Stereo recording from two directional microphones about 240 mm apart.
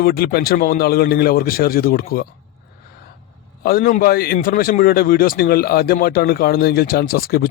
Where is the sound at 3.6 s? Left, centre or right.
Left.